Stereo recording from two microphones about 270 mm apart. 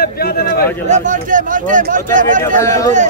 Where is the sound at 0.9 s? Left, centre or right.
Right.